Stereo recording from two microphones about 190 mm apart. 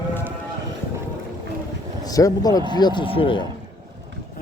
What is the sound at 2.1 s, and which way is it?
A man's voice, 20° left (ahead or behind).